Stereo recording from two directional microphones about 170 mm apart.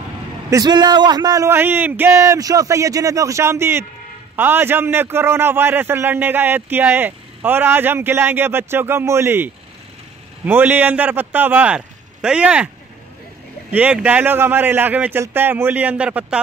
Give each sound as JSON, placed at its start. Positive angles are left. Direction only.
{"t": 0.5, "sound": "a man's voice", "side_deg": -20}
{"t": 13.7, "sound": "a man's voice", "side_deg": -10}